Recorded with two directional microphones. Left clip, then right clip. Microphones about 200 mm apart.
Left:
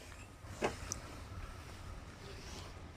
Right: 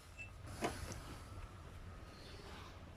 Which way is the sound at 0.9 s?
30° left (ahead or behind).